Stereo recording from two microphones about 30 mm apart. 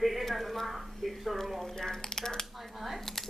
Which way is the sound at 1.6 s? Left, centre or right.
Centre.